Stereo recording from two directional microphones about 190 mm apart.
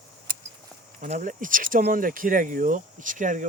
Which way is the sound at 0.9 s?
40° right (ahead or behind).